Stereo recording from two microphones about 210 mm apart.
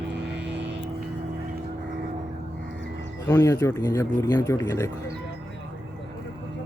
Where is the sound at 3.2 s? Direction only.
15° left (ahead or behind).